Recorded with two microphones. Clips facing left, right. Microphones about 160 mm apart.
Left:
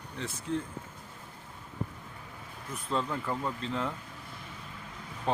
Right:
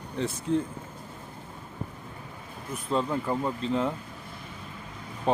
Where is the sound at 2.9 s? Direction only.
15° right (ahead or behind).